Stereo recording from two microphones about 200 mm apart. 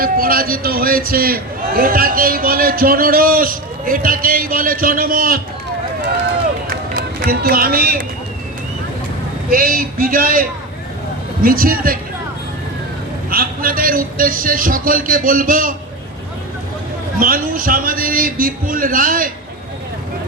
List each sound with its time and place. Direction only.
0.0 s a man's voice: 45° right (ahead or behind)
6.7 s run: 45° right (ahead or behind)
9.5 s a man's voice: 45° right (ahead or behind)
11.4 s a man's voice: 45° right (ahead or behind)
13.3 s a man's voice: 45° right (ahead or behind)
17.2 s a man's voice: 45° right (ahead or behind)